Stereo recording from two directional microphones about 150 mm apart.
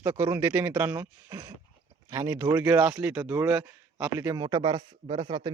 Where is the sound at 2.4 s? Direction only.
20° right (ahead or behind).